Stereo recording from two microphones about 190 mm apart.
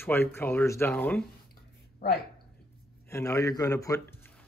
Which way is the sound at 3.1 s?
15° left (ahead or behind).